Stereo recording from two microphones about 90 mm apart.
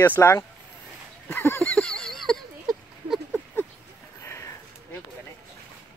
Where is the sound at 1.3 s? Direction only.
25° left (ahead or behind).